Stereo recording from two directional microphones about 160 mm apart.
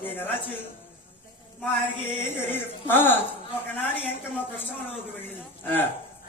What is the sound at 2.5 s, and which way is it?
A man's voice, 15° left (ahead or behind).